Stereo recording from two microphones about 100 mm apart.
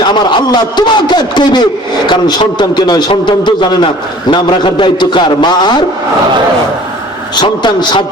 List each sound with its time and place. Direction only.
0.0 s a man's voice: 50° left (ahead or behind)
7.4 s a man's voice: 50° left (ahead or behind)